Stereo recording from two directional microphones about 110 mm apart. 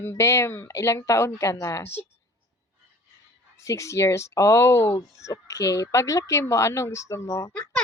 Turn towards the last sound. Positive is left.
turn(degrees=15)  # may be behind; listen again after turning